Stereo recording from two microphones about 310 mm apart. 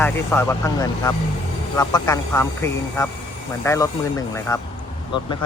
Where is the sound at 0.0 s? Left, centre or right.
Centre.